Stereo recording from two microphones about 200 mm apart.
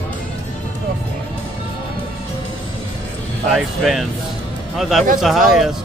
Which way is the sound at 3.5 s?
Centre (ahead or behind).